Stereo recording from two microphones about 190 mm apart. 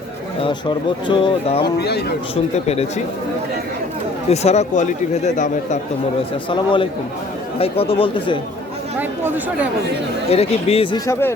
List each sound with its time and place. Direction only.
1.0 s speech: 25° left (ahead or behind)
1.6 s speech: 60° left (ahead or behind)
2.3 s speech: 30° left (ahead or behind)
4.3 s speech: 35° left (ahead or behind)
6.5 s speech: 25° left (ahead or behind)
9.0 s speech: 10° right (ahead or behind)
10.2 s speech: 35° left (ahead or behind)
11.0 s speech: 15° left (ahead or behind)